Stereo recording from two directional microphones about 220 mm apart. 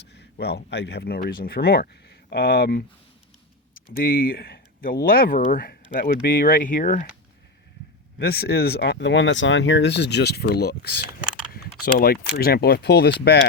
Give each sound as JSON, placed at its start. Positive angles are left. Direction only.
{"t": 0.0, "sound": "speech", "side_deg": 50}
{"t": 8.2, "sound": "speech", "side_deg": 45}